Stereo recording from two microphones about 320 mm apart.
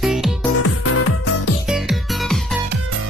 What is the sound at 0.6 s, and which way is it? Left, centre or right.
Music, left.